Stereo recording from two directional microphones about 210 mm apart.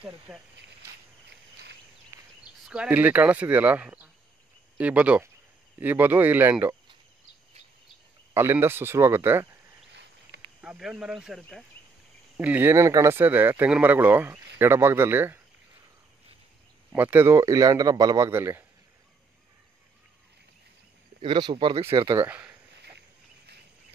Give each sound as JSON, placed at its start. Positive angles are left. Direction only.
{"t": 0.3, "sound": "speech", "side_deg": -5}
{"t": 2.1, "sound": "a sound", "side_deg": -10}
{"t": 2.7, "sound": "speech", "side_deg": -5}
{"t": 8.3, "sound": "speech", "side_deg": -10}
{"t": 10.6, "sound": "speech", "side_deg": -5}
{"t": 16.9, "sound": "speech", "side_deg": -10}
{"t": 21.2, "sound": "speech", "side_deg": -25}
{"t": 22.2, "sound": "speech", "side_deg": -10}
{"t": 22.9, "sound": "a sound", "side_deg": -50}